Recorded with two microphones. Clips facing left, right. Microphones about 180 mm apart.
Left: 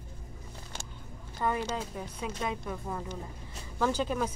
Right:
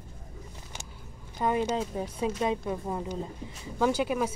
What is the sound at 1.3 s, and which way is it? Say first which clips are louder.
Speech: right 4 dB; 20° right (ahead or behind).